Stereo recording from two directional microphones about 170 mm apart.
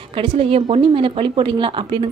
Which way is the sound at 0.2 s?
35° right (ahead or behind).